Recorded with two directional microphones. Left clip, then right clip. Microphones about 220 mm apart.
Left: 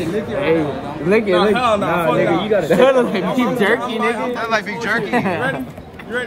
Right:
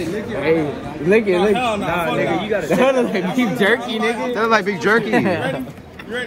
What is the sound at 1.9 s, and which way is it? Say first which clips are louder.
Speech: left 3 dB; 45° left (ahead or behind).